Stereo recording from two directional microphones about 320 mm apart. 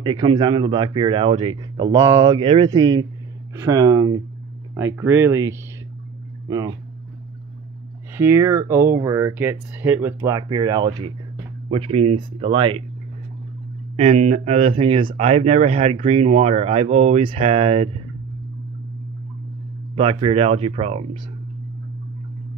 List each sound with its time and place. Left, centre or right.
0.0 s speech: centre
8.2 s speech: centre
13.9 s speech: right
20.0 s speech: centre